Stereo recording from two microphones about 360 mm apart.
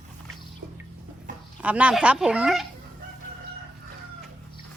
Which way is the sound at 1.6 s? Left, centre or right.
Centre.